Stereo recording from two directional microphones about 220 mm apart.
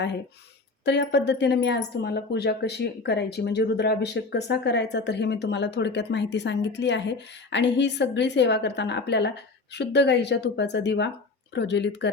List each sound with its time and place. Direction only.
0.9 s speech: 50° left (ahead or behind)